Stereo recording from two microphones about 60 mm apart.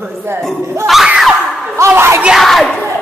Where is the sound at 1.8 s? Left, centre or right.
Right.